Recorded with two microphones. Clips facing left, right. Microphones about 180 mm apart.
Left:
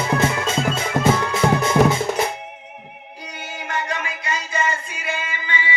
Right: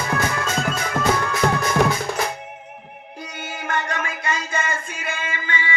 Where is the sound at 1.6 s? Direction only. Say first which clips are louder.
Left 5 dB; 25° left (ahead or behind).